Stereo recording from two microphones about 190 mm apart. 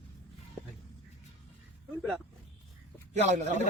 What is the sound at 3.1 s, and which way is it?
Speech, 40° right (ahead or behind).